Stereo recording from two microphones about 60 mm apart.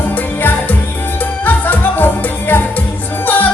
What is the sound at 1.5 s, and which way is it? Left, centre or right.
Music, left.